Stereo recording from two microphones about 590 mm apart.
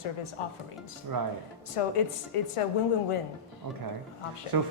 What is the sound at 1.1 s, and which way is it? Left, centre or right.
Speech, right.